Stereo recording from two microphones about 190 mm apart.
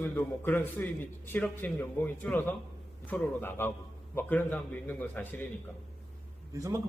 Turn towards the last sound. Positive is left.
turn(degrees=-15)  # may be behind; listen again after turning